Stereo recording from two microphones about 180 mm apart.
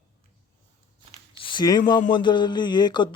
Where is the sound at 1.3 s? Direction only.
25° left (ahead or behind).